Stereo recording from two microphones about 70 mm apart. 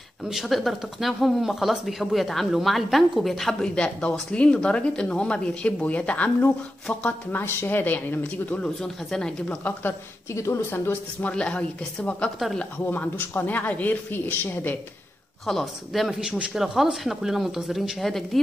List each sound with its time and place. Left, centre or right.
0.3 s speech: centre
3.7 s a man's voice: centre
8.6 s speech: centre
10.3 s speech: left
10.7 s a man's voice: left
15.4 s speech: centre